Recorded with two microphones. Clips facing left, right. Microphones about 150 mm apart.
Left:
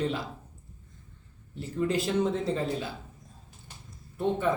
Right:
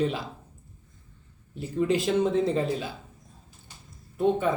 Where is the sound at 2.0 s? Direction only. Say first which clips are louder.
Right 4 dB; 15° right (ahead or behind).